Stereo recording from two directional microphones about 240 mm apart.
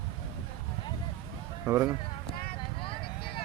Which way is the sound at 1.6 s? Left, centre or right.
Centre.